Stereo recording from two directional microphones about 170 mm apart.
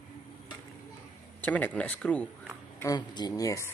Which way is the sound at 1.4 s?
10° left (ahead or behind).